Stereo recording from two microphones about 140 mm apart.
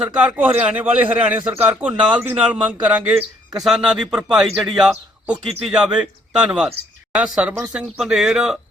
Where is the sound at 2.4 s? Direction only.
10° right (ahead or behind).